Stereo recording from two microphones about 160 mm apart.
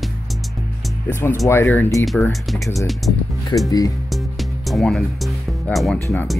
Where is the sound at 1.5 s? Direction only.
15° left (ahead or behind).